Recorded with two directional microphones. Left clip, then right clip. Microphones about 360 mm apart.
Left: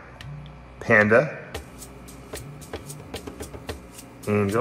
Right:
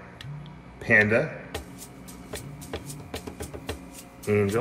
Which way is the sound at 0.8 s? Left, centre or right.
Centre.